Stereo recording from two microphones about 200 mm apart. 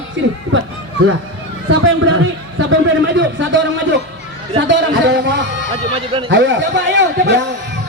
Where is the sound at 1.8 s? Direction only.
90° right.